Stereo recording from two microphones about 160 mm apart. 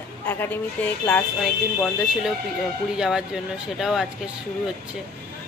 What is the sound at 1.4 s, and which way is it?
A woman's voice, centre (ahead or behind).